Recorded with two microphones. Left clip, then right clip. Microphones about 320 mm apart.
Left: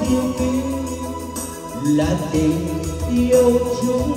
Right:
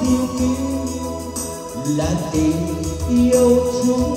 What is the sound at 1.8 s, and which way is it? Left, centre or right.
Music, left.